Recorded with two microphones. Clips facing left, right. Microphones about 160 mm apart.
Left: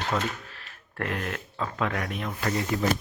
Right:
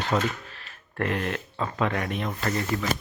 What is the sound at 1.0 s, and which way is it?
A man's voice, centre (ahead or behind).